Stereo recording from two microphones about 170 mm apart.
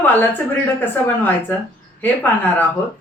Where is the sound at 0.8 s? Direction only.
10° left (ahead or behind).